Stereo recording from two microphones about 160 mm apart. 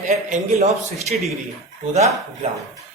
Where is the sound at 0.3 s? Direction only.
45° right (ahead or behind).